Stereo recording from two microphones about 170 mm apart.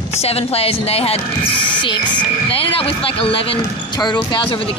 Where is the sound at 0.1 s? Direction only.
35° left (ahead or behind).